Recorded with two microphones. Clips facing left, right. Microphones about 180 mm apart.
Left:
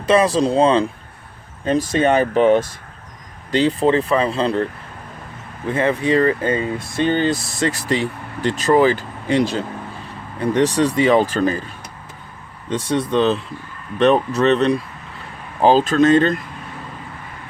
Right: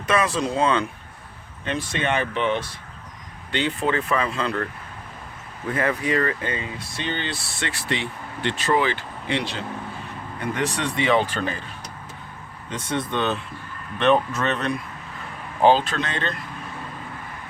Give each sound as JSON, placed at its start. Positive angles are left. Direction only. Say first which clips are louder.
{"t": 0.0, "sound": "speech", "louder": "left 7 dB", "side_deg": 30}
{"t": 12.7, "sound": "speech", "louder": "left 8 dB", "side_deg": 35}